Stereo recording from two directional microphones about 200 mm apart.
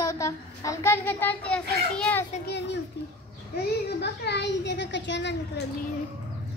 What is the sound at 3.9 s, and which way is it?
A child's voice, 60° left (ahead or behind).